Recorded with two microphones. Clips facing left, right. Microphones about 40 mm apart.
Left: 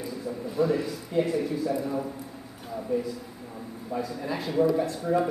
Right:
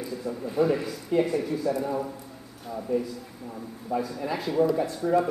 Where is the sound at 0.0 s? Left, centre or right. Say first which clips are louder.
Right 1 dB; centre.